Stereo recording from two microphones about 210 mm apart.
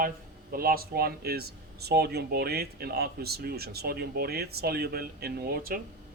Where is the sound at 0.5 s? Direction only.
45° right (ahead or behind).